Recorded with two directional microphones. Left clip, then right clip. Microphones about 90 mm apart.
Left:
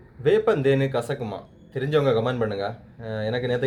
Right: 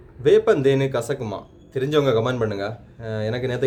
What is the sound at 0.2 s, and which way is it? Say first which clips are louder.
Speech: right 4 dB; 25° right (ahead or behind).